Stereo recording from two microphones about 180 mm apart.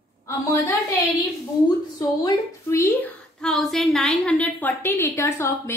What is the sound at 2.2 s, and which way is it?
Speech, 20° left (ahead or behind).